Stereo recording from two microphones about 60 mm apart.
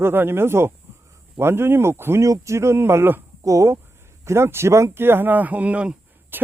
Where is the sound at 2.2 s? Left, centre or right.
Right.